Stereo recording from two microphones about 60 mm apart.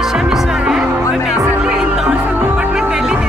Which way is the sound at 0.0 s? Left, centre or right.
Centre.